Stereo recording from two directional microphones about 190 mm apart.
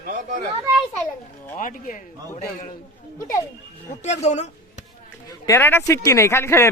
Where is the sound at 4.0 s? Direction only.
35° left (ahead or behind).